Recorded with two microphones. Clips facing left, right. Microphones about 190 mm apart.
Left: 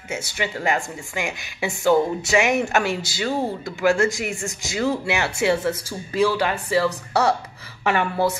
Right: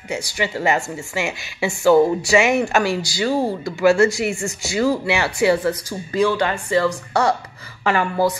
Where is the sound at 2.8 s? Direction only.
20° left (ahead or behind).